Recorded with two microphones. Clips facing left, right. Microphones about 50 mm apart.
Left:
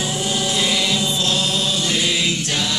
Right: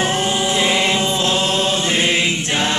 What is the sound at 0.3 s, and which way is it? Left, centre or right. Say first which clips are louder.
Music: right 3 dB; right.